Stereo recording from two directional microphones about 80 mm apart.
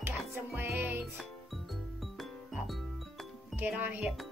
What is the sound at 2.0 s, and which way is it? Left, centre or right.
Music, centre.